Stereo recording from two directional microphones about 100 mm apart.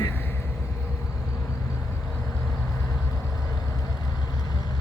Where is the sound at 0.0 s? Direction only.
20° left (ahead or behind).